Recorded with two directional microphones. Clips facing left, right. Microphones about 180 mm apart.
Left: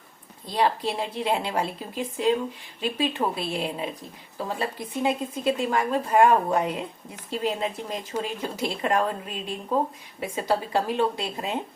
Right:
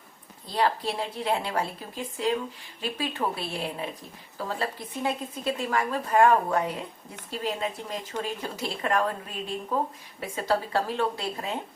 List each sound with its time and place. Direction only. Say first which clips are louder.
0.5 s a woman's voice: left 2 dB; 20° left (ahead or behind)
10.2 s speech: left 1 dB; 15° left (ahead or behind)